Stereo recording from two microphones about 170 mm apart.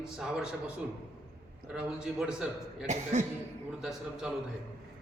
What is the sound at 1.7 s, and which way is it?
Speech, 5° right (ahead or behind).